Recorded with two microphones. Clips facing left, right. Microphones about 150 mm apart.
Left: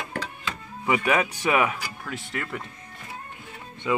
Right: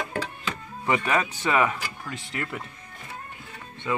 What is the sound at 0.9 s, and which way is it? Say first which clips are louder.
Speech: left 1 dB; 10° left (ahead or behind).